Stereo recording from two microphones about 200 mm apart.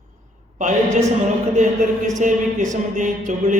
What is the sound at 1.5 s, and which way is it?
Speech, 35° right (ahead or behind).